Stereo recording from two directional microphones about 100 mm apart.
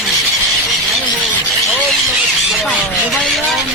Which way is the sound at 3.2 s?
5° left (ahead or behind).